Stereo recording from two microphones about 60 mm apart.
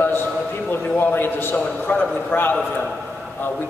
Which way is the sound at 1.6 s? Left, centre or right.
Left.